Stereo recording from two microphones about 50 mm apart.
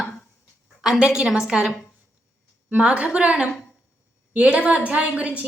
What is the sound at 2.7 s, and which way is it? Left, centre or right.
A woman's voice, right.